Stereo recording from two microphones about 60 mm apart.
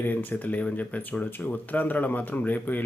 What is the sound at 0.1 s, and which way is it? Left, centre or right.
Speech, left.